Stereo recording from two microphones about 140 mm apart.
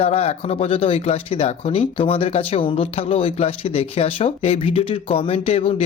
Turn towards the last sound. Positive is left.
turn(degrees=45)  # may be behind; listen again after turning